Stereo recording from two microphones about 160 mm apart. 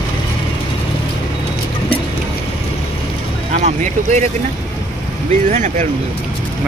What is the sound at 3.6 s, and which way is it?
Speech, 50° right (ahead or behind).